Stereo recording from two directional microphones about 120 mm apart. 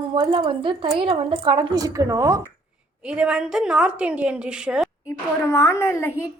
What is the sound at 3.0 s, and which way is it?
Speech, 10° right (ahead or behind).